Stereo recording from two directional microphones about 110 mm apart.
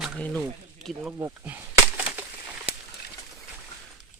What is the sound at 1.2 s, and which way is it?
Speech, 20° right (ahead or behind).